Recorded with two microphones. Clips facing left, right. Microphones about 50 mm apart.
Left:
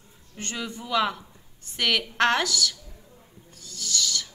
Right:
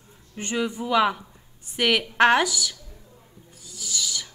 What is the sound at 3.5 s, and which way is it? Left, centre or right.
Owl, centre.